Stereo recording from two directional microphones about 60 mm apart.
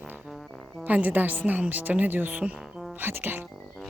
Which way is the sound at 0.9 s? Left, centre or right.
Right.